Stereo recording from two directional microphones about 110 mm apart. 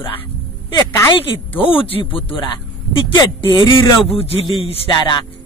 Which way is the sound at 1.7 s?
55° left (ahead or behind).